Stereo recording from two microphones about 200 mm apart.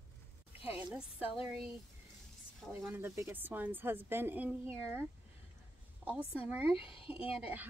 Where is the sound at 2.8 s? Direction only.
10° right (ahead or behind).